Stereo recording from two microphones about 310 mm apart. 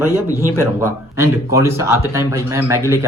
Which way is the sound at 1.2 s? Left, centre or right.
Centre.